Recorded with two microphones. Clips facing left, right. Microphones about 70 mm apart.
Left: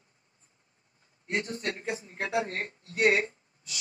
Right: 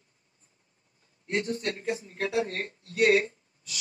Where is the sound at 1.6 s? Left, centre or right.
Left.